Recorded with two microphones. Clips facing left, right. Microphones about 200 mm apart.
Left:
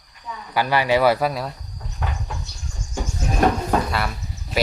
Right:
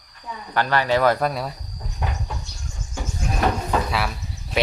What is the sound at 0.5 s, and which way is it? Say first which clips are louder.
Speech: left 1 dB; 10° left (ahead or behind).